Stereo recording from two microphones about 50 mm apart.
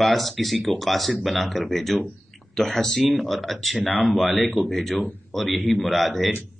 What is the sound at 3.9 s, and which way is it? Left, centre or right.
Speech, left.